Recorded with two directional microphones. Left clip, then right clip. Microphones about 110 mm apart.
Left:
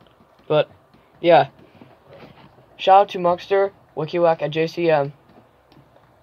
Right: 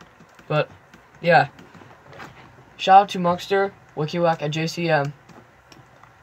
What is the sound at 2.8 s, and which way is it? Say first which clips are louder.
Speech: even; 90° left.